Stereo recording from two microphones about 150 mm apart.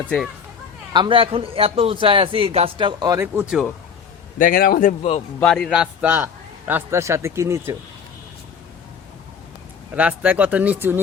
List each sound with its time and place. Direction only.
0.9 s a man's voice: 35° right (ahead or behind)
3.3 s a man's voice: 5° right (ahead or behind)
4.4 s speech: 70° left (ahead or behind); by 5.2 s 50° left (ahead or behind)
5.4 s a man's voice: 5° left (ahead or behind)
5.6 s a man's voice: 5° right (ahead or behind)
9.9 s a man's voice: 10° right (ahead or behind)